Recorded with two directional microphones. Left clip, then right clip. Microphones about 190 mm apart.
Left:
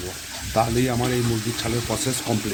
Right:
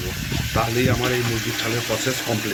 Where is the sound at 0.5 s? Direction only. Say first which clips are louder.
Even; 55° left (ahead or behind).